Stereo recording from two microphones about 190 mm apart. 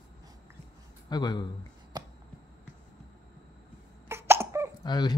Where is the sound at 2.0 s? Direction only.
20° right (ahead or behind).